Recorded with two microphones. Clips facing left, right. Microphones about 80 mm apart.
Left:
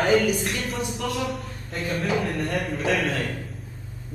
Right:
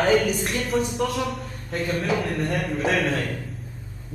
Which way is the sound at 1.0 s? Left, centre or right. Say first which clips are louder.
Right 1 dB; centre.